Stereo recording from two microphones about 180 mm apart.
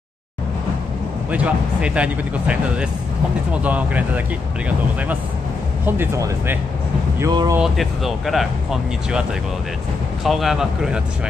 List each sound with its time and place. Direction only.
1.3 s speech: 5° right (ahead or behind)
5.9 s speech: 10° right (ahead or behind)
7.5 s speech: centre (ahead or behind)
10.2 s speech: centre (ahead or behind)